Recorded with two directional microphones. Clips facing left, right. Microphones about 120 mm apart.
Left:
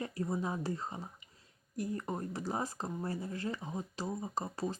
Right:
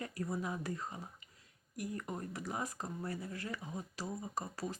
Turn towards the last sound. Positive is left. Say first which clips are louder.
# left 4 dB
turn(degrees=25)  # may be behind; listen again after turning